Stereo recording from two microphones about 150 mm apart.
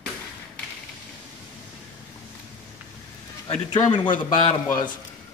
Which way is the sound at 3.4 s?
30° left (ahead or behind).